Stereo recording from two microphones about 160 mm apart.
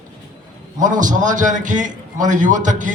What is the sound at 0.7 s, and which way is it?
A man's voice, 55° right (ahead or behind).